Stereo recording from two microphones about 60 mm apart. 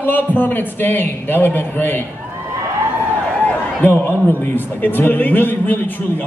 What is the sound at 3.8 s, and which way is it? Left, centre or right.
A man's voice, left.